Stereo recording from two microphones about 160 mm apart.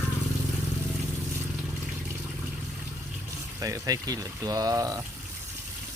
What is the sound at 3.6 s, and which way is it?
Speech, 20° right (ahead or behind).